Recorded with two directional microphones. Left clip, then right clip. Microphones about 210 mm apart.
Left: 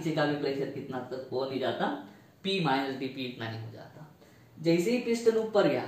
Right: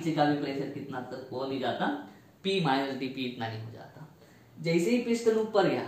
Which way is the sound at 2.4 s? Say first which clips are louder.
Right 1 dB; 20° right (ahead or behind).